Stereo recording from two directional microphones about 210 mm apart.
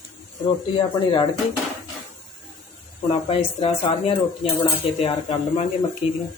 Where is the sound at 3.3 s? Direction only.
25° left (ahead or behind).